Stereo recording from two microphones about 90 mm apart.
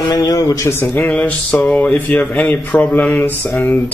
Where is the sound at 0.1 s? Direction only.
45° left (ahead or behind).